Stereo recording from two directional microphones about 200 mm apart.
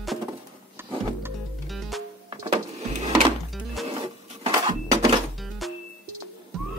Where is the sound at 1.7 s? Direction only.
Centre (ahead or behind).